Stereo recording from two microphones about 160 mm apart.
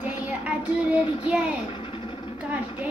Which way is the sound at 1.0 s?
35° left (ahead or behind).